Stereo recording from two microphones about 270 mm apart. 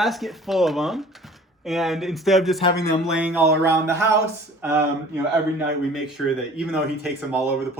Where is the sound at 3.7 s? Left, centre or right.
Centre.